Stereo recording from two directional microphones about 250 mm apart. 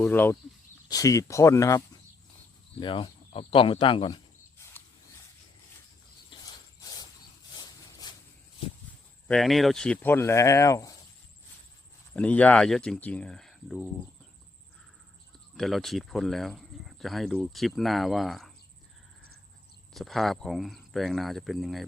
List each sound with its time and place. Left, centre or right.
0.0 s speech: centre
2.8 s speech: left
6.3 s cricket: centre
7.5 s a sound: centre
9.2 s speech: centre
12.1 s speech: centre
15.5 s speech: centre
19.9 s speech: centre